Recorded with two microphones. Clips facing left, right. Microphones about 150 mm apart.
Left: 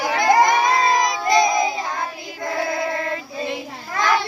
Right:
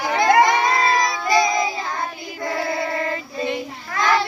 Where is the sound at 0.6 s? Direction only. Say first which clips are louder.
Left 1 dB; 15° left (ahead or behind).